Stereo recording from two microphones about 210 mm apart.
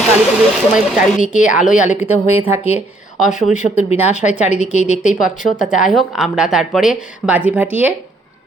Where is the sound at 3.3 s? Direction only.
35° left (ahead or behind).